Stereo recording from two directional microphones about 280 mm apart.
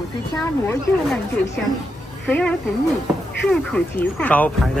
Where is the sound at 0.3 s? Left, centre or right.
Centre.